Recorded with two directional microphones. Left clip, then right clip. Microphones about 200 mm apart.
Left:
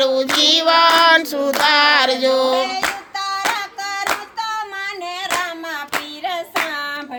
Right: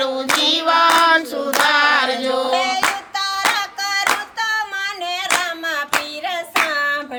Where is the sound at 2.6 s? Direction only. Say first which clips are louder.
Right 3 dB; 45° right (ahead or behind).